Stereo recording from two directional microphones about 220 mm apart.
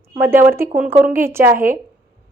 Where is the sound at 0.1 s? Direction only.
10° right (ahead or behind).